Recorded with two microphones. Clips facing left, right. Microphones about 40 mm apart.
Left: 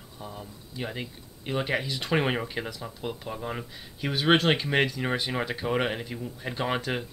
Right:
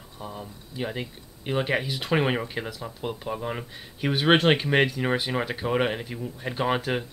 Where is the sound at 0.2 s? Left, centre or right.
Centre.